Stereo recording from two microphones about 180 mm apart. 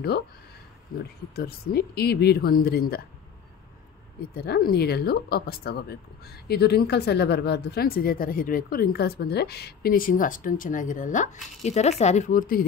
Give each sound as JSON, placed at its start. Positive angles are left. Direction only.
{"t": 0.9, "sound": "speech", "side_deg": 60}
{"t": 4.4, "sound": "speech", "side_deg": 55}